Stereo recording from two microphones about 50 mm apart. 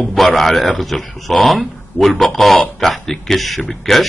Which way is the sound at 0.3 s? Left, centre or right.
Centre.